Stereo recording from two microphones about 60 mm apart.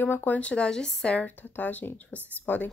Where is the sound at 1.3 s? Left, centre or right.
Left.